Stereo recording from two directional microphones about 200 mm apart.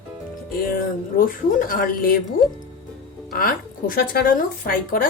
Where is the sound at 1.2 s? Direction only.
45° left (ahead or behind).